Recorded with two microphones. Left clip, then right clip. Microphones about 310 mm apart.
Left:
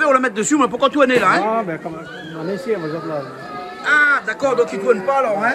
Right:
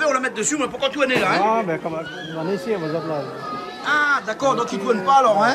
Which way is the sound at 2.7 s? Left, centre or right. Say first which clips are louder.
Left 5 dB; right.